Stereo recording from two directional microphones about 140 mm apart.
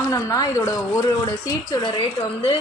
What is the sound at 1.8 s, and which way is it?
Speech, 35° left (ahead or behind).